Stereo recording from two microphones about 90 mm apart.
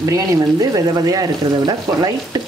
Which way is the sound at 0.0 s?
40° right (ahead or behind).